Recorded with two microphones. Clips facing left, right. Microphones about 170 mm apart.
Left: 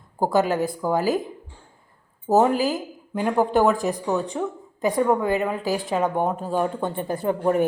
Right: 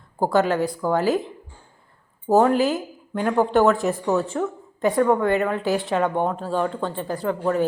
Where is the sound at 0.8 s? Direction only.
10° left (ahead or behind).